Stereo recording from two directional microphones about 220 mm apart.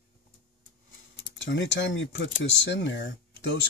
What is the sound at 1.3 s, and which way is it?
Speech, 55° left (ahead or behind).